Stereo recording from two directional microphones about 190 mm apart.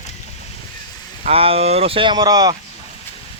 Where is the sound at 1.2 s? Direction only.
30° right (ahead or behind).